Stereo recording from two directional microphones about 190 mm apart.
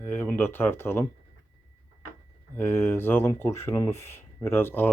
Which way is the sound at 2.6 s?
10° left (ahead or behind).